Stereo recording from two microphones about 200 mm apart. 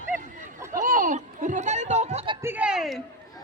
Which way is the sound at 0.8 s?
40° right (ahead or behind).